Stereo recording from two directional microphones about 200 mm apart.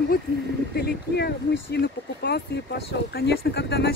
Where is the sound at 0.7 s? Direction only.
55° left (ahead or behind).